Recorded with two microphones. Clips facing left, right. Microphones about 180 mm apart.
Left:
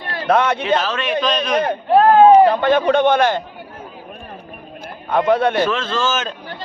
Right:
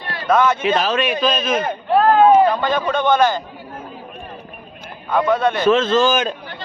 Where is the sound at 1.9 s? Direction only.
20° left (ahead or behind).